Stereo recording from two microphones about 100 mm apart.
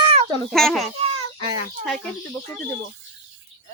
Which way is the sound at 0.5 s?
5° left (ahead or behind).